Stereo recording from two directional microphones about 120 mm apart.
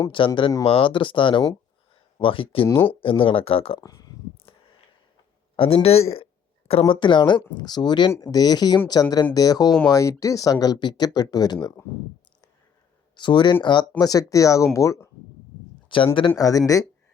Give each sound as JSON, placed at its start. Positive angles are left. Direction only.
{"t": 0.2, "sound": "speech", "side_deg": 45}
{"t": 2.6, "sound": "speech", "side_deg": 20}
{"t": 3.0, "sound": "speech", "side_deg": 50}
{"t": 3.8, "sound": "speech", "side_deg": 30}
{"t": 5.5, "sound": "speech", "side_deg": 50}
{"t": 13.1, "sound": "speech", "side_deg": 40}
{"t": 15.9, "sound": "speech", "side_deg": 45}
{"t": 16.4, "sound": "speech", "side_deg": 30}